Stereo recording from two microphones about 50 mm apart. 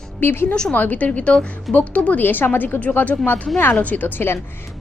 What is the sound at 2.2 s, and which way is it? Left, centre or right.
A woman's voice, left.